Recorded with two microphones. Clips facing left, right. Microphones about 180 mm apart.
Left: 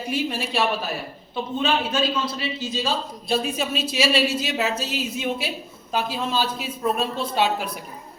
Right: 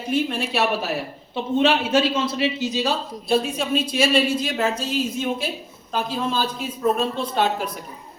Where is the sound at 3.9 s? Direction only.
50° right (ahead or behind).